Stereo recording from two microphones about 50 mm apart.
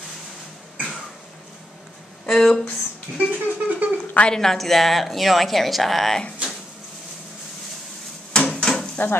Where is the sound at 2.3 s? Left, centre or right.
Centre.